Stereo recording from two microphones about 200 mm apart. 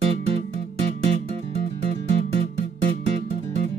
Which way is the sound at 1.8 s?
30° right (ahead or behind).